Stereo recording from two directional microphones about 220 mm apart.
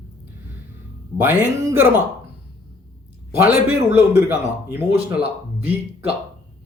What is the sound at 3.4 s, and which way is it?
Speech, 10° right (ahead or behind).